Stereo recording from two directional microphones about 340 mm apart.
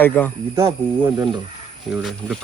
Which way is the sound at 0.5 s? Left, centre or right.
Centre.